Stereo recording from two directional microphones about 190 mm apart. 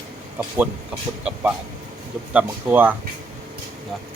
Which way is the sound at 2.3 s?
10° right (ahead or behind).